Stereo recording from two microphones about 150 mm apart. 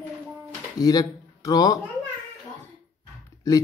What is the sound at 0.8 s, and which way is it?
Speech, 25° left (ahead or behind).